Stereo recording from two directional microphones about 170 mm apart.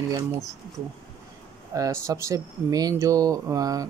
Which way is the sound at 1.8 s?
15° right (ahead or behind).